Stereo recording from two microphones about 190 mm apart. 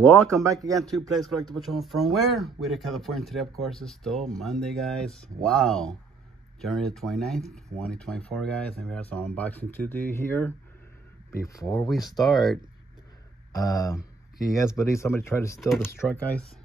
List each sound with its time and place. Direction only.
0.3 s speech: 15° right (ahead or behind)
0.9 s speech: centre (ahead or behind); by 11.7 s 15° left (ahead or behind)
11.9 s speech: centre (ahead or behind)
13.5 s speech: 20° left (ahead or behind)